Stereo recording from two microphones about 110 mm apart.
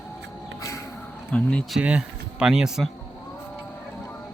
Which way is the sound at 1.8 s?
10° right (ahead or behind).